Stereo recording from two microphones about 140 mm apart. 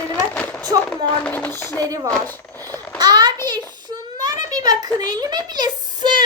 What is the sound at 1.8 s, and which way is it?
Speech, 25° right (ahead or behind).